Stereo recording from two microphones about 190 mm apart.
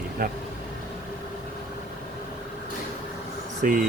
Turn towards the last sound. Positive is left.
turn(degrees=-45)  # may be behind; listen again after turning